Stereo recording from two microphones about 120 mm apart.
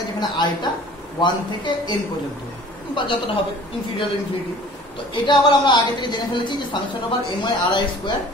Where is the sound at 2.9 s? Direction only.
40° left (ahead or behind).